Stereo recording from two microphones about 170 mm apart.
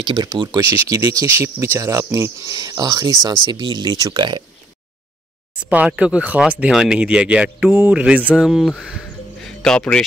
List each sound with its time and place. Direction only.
0.0 s speech: 25° right (ahead or behind)
5.7 s speech: 10° right (ahead or behind)